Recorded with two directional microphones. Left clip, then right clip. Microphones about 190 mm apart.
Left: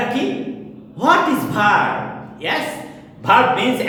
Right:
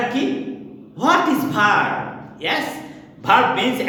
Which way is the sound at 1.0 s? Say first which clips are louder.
Left 2 dB; 25° right (ahead or behind).